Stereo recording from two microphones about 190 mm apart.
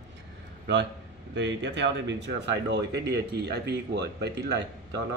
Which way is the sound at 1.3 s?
70° right (ahead or behind).